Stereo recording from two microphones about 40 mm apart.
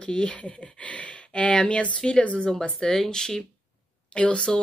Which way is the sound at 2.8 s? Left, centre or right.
Centre.